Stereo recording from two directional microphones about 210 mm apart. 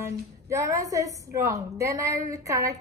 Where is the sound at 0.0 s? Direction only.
15° right (ahead or behind).